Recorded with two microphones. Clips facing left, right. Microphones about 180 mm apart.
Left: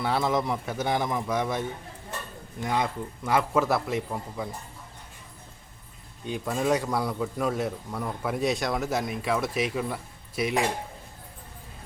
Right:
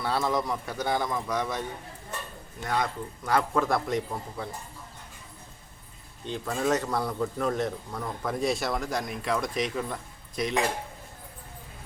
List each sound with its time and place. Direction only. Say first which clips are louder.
0.0 s a man's voice: left 2 dB; 20° left (ahead or behind)
2.6 s a man's voice: left 1 dB; 15° left (ahead or behind)
3.6 s a man's voice: left 1 dB; 5° left (ahead or behind)
6.2 s a man's voice: left 2 dB; 10° left (ahead or behind)